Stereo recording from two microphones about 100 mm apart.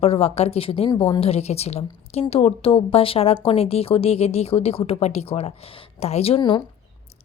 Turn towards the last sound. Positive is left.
turn(degrees=55)  # may be behind; listen again after turning